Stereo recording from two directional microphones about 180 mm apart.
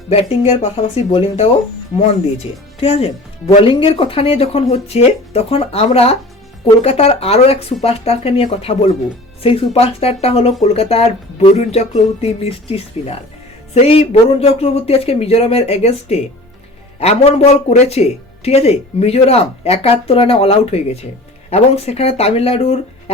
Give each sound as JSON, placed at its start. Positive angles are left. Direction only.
{"t": 0.1, "sound": "speech", "side_deg": 35}
{"t": 2.8, "sound": "speech", "side_deg": 35}